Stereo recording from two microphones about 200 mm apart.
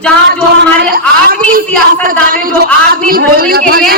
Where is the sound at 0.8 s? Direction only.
50° right (ahead or behind).